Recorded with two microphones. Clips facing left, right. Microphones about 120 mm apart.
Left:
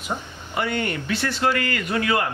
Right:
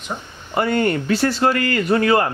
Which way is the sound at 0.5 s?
40° right (ahead or behind).